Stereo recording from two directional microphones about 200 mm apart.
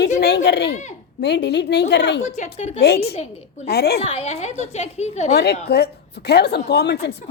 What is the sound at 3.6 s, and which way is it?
Speech, 50° left (ahead or behind).